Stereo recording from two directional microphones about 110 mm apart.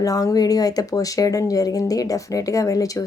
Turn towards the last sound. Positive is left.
turn(degrees=30)  # may be behind; listen again after turning